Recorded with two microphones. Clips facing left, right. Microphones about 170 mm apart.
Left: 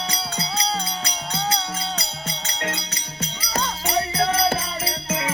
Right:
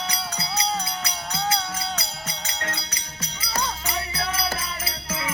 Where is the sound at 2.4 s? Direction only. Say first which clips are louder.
Left 4 dB; 25° left (ahead or behind).